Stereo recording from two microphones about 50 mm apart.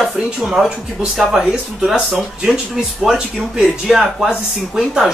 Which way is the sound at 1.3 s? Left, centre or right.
Centre.